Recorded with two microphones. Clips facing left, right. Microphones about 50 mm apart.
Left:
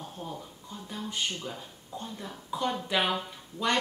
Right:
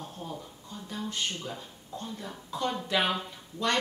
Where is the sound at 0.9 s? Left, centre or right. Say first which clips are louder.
Even; centre.